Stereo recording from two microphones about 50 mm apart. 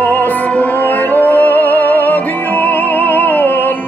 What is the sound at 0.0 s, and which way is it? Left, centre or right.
Music, left.